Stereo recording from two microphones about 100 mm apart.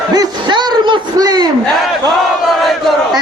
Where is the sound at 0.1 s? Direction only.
45° right (ahead or behind).